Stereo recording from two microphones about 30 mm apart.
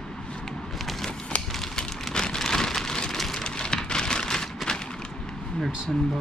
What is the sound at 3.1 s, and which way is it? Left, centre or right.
Vehicle, centre.